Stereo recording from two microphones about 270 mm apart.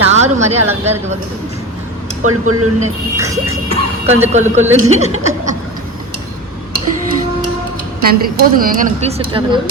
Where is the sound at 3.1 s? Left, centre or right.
Centre.